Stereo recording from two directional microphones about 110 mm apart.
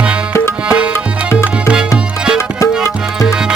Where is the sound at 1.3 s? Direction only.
10° right (ahead or behind).